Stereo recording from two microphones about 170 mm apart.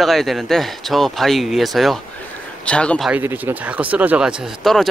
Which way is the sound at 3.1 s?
10° right (ahead or behind).